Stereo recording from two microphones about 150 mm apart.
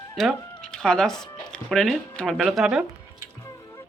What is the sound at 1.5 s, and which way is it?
Speech, centre (ahead or behind).